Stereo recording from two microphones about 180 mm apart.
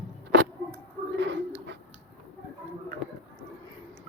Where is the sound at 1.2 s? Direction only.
85° right.